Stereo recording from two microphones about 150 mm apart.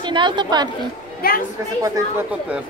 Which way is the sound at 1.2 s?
80° left.